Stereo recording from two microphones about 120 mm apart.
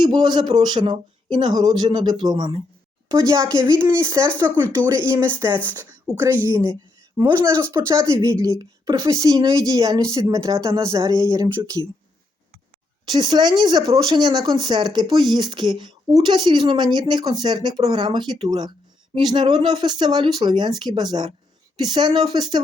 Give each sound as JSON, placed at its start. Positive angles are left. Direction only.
{"t": 0.0, "sound": "speech", "side_deg": -40}
{"t": 3.1, "sound": "speech", "side_deg": -25}
{"t": 4.3, "sound": "speech", "side_deg": 15}
{"t": 5.1, "sound": "speech", "side_deg": -20}
{"t": 6.1, "sound": "speech", "side_deg": 20}
{"t": 7.4, "sound": "speech", "side_deg": -25}
{"t": 13.1, "sound": "speech", "side_deg": -35}